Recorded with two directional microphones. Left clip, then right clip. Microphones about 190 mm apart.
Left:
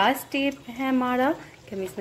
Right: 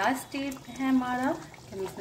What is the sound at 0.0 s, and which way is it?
Speech, 45° left (ahead or behind).